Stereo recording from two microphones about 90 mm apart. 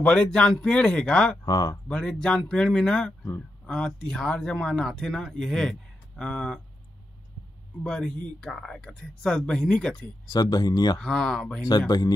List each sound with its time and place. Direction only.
0.0 s speech: 10° left (ahead or behind)
1.4 s speech: 50° left (ahead or behind)
1.9 s speech: 10° left (ahead or behind)
7.8 s speech: 10° left (ahead or behind)
10.2 s speech: 45° left (ahead or behind)
11.0 s speech: 10° left (ahead or behind)